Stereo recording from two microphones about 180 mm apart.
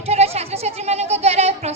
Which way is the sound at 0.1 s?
35° right (ahead or behind).